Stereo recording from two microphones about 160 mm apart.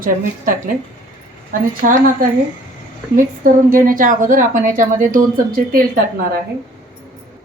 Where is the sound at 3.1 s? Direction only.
60° right (ahead or behind).